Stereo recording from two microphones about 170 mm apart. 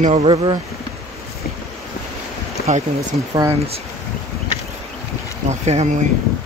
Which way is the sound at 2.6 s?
65° left (ahead or behind).